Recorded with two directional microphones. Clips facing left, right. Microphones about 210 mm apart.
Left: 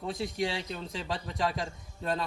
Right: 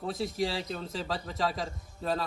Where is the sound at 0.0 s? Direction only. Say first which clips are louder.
Right 1 dB; centre (ahead or behind).